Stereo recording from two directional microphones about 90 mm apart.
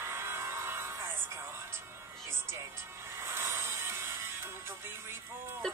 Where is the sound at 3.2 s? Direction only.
30° right (ahead or behind).